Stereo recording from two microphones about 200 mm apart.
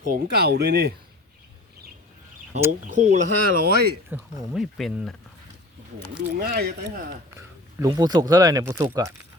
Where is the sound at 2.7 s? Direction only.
40° right (ahead or behind).